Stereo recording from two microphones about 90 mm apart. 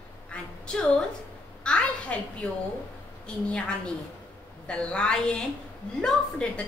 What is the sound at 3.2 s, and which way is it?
Speech, 15° left (ahead or behind).